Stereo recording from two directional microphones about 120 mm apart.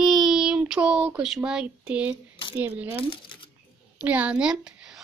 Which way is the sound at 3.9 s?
10° right (ahead or behind).